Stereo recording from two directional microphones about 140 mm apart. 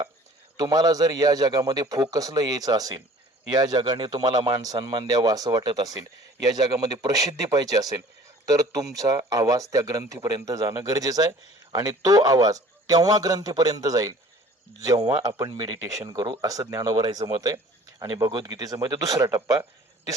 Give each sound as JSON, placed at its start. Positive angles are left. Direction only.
{"t": 0.5, "sound": "speech", "side_deg": -25}